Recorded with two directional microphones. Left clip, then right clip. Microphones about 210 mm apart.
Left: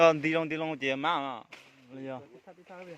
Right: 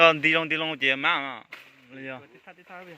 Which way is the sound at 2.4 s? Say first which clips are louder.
Right 4 dB; 25° right (ahead or behind).